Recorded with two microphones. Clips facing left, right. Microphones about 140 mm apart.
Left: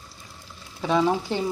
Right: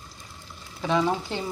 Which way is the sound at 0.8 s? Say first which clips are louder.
Left 2 dB; 10° left (ahead or behind).